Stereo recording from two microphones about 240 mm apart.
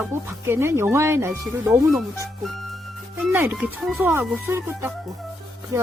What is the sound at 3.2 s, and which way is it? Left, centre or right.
Speech, centre.